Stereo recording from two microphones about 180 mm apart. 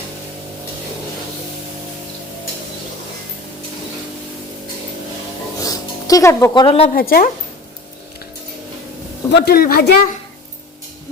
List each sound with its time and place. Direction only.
5.6 s a sound: 20° left (ahead or behind)
6.9 s speech: 55° left (ahead or behind)
9.3 s speech: 65° left (ahead or behind)